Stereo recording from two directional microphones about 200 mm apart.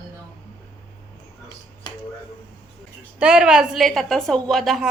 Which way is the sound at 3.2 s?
5° right (ahead or behind).